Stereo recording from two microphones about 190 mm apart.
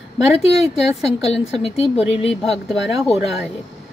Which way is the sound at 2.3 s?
Centre (ahead or behind).